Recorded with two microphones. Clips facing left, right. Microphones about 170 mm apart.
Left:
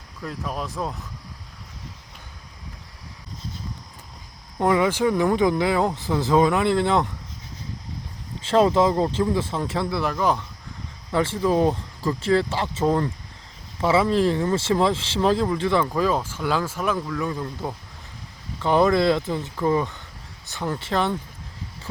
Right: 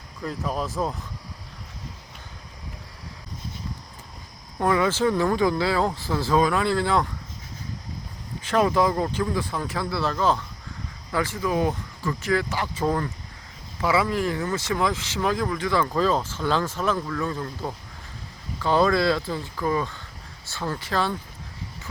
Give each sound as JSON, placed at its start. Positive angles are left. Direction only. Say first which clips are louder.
{"t": 0.2, "sound": "speech", "louder": "right 2 dB", "side_deg": 0}
{"t": 4.6, "sound": "speech", "louder": "left 2 dB", "side_deg": 20}
{"t": 8.4, "sound": "speech", "louder": "left 3 dB", "side_deg": 25}
{"t": 11.1, "sound": "speech", "louder": "left 4 dB", "side_deg": 25}
{"t": 15.9, "sound": "speech", "louder": "even", "side_deg": 10}